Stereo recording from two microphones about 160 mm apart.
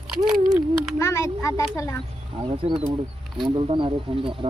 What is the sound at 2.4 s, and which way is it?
Speech, 35° right (ahead or behind).